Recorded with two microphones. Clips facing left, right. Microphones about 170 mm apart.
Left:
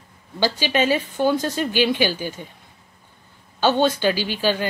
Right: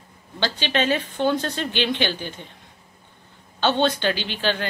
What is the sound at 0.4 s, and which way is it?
Speech, 10° left (ahead or behind).